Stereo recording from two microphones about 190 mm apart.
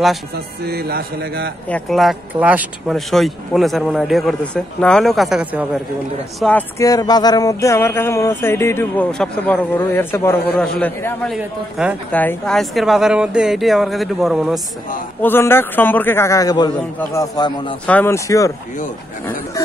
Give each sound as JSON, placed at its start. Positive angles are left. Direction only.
{"t": 0.7, "sound": "speech", "side_deg": -55}
{"t": 1.7, "sound": "speech", "side_deg": 0}
{"t": 6.8, "sound": "speech", "side_deg": 20}
{"t": 11.3, "sound": "speech", "side_deg": -5}
{"t": 12.1, "sound": "speech", "side_deg": 10}
{"t": 15.2, "sound": "speech", "side_deg": 10}